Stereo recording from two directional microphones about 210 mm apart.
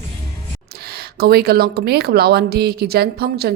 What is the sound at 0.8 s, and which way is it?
Speech, 50° right (ahead or behind).